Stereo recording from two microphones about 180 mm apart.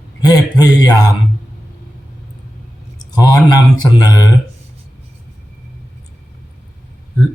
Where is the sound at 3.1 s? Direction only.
20° left (ahead or behind).